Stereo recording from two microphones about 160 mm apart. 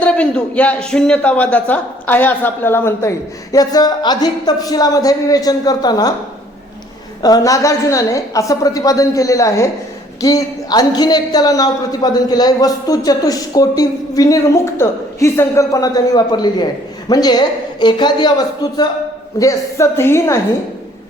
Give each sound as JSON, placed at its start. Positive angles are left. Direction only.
{"t": 0.0, "sound": "a man's voice", "side_deg": 5}
{"t": 7.2, "sound": "a woman's voice", "side_deg": 25}